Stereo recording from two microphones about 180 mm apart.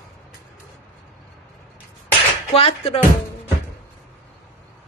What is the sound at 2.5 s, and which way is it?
Speech, 35° left (ahead or behind).